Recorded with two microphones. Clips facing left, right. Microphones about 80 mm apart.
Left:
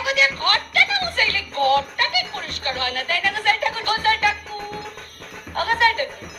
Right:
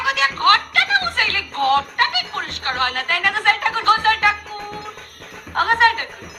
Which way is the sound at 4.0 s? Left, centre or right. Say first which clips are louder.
Right 2 dB; right.